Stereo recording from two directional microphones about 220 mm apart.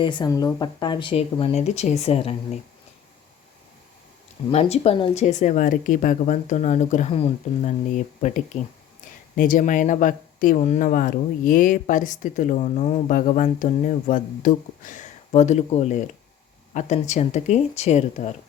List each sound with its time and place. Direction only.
0.0 s speech: 20° left (ahead or behind)
4.5 s speech: 30° left (ahead or behind)